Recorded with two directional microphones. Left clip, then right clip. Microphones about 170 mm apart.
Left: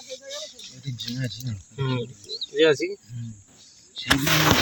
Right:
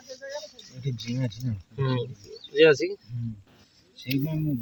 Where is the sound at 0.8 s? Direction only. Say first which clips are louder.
Even; 35° right (ahead or behind).